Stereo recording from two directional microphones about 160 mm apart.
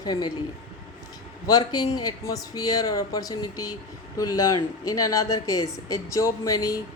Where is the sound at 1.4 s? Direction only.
25° left (ahead or behind).